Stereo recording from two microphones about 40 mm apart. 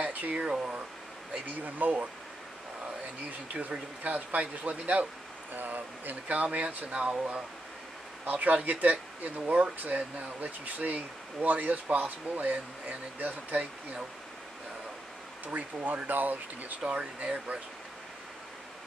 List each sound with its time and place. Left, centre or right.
0.0 s a sound: right
0.4 s speech: right
1.6 s speech: right
4.0 s speech: right
15.4 s speech: right
16.8 s speech: right